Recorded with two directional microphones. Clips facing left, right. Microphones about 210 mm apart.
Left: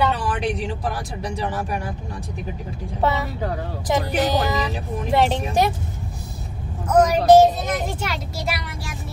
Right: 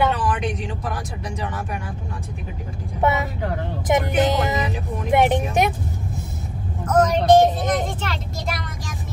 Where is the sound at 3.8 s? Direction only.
20° right (ahead or behind).